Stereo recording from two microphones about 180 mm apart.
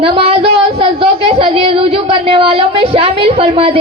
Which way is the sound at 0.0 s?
30° right (ahead or behind).